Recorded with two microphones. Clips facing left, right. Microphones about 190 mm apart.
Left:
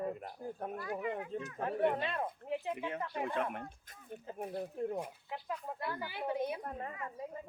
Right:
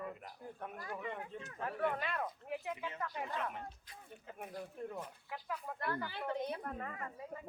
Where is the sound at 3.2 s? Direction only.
55° left (ahead or behind).